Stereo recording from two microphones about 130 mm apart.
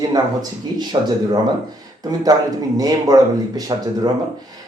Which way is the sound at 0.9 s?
40° right (ahead or behind).